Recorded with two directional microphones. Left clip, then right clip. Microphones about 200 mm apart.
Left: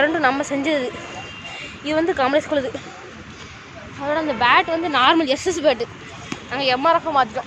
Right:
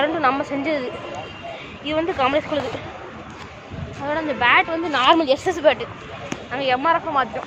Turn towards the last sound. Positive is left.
turn(degrees=30)  # may be behind; listen again after turning